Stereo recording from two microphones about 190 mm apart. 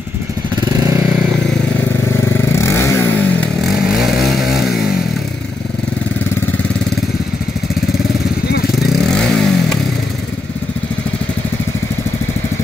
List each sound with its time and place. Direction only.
0.6 s motorcycle: 20° right (ahead or behind)
2.5 s vehicle: 15° left (ahead or behind)
3.7 s vehicle: centre (ahead or behind)
8.7 s motorcycle: centre (ahead or behind)